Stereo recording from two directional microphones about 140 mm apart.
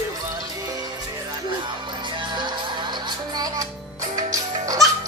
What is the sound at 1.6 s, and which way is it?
Music, 35° right (ahead or behind).